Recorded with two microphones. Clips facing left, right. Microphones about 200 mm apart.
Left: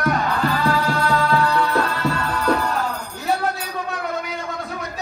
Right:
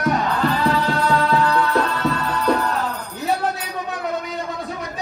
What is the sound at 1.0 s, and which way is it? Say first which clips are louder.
Music: right 1 dB; centre (ahead or behind).